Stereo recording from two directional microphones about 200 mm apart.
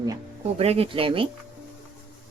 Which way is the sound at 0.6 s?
30° right (ahead or behind).